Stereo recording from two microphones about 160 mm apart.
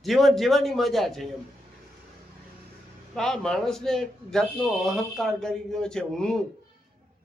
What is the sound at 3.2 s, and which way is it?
A man's voice, 5° left (ahead or behind).